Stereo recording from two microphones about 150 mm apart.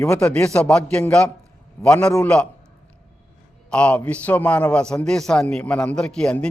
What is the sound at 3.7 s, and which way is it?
A man's voice, 10° left (ahead or behind).